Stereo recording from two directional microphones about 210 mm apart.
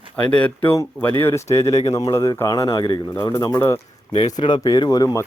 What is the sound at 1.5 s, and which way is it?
Speech, 30° left (ahead or behind).